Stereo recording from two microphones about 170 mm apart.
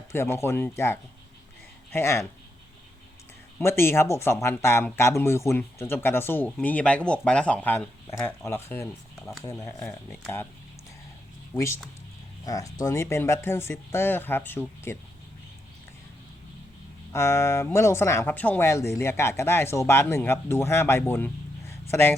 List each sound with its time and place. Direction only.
0.1 s speech: 15° left (ahead or behind)
1.9 s speech: 15° left (ahead or behind)
3.6 s speech: 15° left (ahead or behind)
11.5 s speech: 15° left (ahead or behind)
17.1 s speech: 15° left (ahead or behind)
21.7 s a sound: 15° left (ahead or behind)